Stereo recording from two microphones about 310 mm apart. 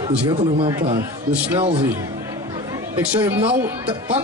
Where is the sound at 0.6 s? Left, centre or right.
Centre.